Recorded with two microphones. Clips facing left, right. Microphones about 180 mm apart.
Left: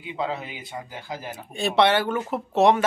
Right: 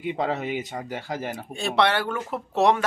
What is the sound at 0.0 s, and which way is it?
Speech, 60° right (ahead or behind).